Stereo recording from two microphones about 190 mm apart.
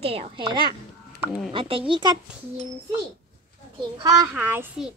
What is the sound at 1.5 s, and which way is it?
Speech, 25° right (ahead or behind).